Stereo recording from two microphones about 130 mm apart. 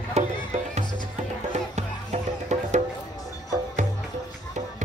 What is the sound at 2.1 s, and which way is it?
Music, 55° right (ahead or behind).